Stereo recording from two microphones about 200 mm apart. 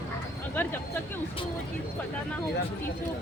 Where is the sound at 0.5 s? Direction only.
10° left (ahead or behind).